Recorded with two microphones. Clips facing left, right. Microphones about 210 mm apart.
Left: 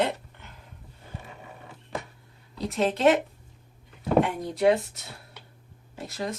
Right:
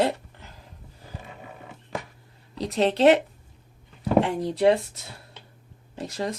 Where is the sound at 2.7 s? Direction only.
35° right (ahead or behind).